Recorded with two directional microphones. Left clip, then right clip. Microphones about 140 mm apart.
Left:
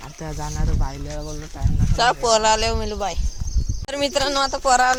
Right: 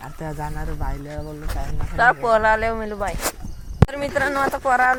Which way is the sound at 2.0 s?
25° left (ahead or behind).